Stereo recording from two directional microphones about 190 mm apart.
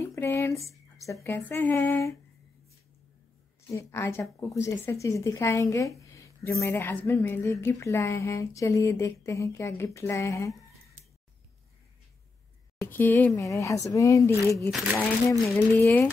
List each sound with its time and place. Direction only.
0.0 s speech: 15° left (ahead or behind)
3.7 s speech: 15° left (ahead or behind)
12.8 s speech: 10° left (ahead or behind)